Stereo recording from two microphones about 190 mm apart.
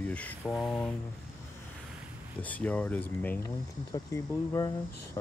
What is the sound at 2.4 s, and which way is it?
Speech, 10° left (ahead or behind).